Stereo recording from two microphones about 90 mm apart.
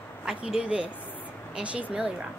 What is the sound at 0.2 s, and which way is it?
Speech, 10° right (ahead or behind).